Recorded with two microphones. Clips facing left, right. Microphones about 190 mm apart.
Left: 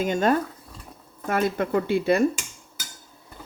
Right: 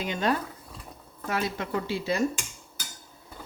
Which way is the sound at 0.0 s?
50° left (ahead or behind).